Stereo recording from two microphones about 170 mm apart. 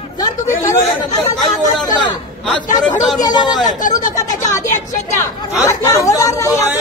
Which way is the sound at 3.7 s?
50° left (ahead or behind).